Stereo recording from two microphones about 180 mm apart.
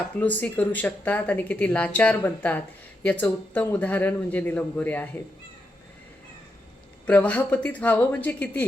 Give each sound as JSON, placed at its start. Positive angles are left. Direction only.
{"t": 0.2, "sound": "speech", "side_deg": 10}
{"t": 7.1, "sound": "speech", "side_deg": 10}